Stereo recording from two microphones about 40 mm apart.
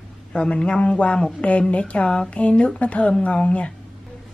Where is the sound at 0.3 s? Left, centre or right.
Left.